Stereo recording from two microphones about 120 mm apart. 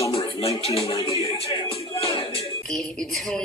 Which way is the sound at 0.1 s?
55° left (ahead or behind).